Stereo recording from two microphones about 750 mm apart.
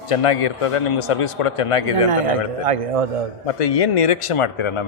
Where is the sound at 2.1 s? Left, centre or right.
Right.